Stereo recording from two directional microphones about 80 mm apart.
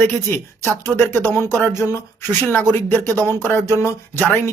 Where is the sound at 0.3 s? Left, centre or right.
Left.